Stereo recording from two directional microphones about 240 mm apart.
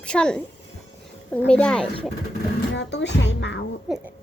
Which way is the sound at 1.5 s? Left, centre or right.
Centre.